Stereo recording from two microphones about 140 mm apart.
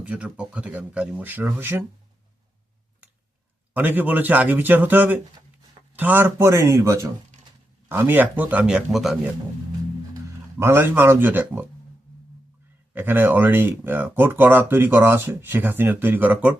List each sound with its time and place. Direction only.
0.0 s speech: 10° right (ahead or behind)
3.8 s speech: 10° right (ahead or behind)
10.6 s speech: 15° right (ahead or behind)
12.9 s speech: 15° right (ahead or behind)